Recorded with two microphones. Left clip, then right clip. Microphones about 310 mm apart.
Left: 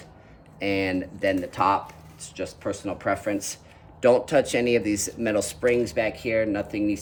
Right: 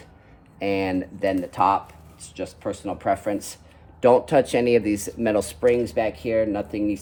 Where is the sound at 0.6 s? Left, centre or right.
Centre.